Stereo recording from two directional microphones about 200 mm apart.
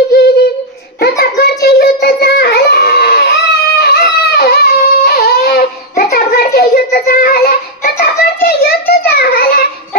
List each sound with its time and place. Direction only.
0.1 s humming: 55° left (ahead or behind)
1.2 s child singing: 55° left (ahead or behind)
3.8 s a sound: 50° left (ahead or behind)